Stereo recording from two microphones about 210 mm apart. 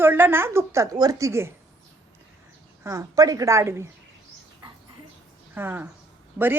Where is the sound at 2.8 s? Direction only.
15° right (ahead or behind).